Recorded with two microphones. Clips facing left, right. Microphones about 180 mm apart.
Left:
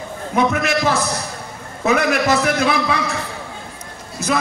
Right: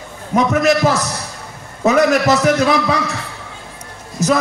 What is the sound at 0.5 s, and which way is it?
A man's voice, 40° right (ahead or behind).